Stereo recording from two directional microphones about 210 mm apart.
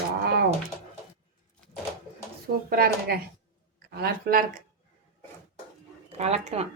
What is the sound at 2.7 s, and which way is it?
Speech, 45° right (ahead or behind).